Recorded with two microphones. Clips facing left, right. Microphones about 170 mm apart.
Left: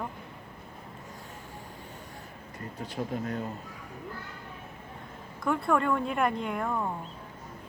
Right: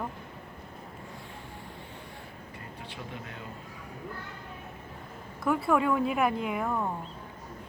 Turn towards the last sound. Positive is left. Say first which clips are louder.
# right 1 dB
turn(degrees=-5)  # may be behind; listen again after turning